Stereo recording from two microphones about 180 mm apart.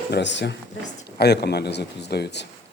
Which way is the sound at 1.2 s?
65° left (ahead or behind).